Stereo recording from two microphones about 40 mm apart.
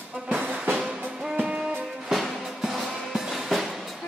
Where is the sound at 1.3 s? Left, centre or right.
Right.